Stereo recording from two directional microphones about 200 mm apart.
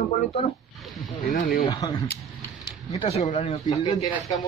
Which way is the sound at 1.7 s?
20° left (ahead or behind).